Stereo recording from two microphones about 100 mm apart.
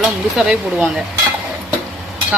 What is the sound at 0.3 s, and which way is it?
Dishes, 10° right (ahead or behind).